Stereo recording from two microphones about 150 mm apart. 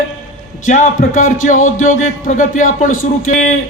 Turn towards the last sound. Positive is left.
turn(degrees=60)  # may be behind; listen again after turning